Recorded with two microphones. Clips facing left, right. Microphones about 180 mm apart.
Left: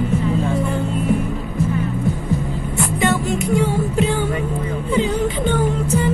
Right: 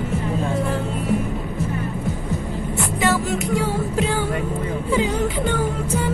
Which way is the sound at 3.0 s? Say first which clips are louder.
Left 1 dB; centre (ahead or behind).